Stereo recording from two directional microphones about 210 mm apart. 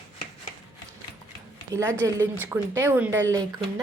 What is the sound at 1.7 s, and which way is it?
Speech, 15° right (ahead or behind).